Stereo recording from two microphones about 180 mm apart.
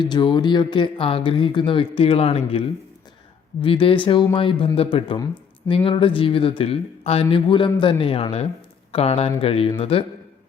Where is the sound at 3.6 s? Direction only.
30° left (ahead or behind).